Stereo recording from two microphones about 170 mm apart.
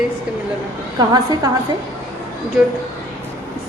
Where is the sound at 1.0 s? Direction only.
20° right (ahead or behind).